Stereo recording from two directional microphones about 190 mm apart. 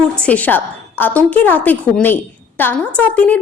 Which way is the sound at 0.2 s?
10° left (ahead or behind).